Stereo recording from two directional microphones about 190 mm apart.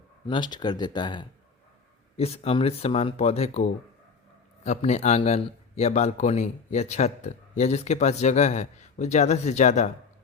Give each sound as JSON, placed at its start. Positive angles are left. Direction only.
{"t": 0.3, "sound": "a man's voice", "side_deg": 25}